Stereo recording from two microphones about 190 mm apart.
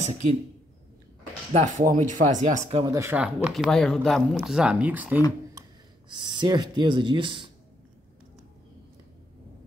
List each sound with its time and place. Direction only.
1.5 s speech: 40° right (ahead or behind)
2.8 s speech: 15° right (ahead or behind)
5.5 s speech: 20° right (ahead or behind)